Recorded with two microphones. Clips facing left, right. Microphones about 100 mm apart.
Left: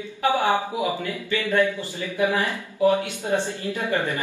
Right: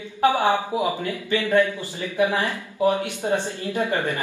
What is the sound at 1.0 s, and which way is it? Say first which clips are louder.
Speech: right 2 dB; 25° right (ahead or behind).